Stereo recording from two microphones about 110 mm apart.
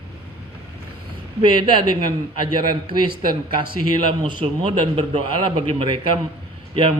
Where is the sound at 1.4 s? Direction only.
45° right (ahead or behind).